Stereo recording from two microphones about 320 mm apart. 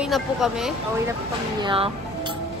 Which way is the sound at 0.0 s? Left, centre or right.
Centre.